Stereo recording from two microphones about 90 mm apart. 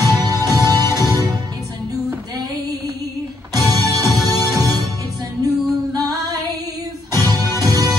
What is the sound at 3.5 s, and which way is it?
Music, 45° right (ahead or behind).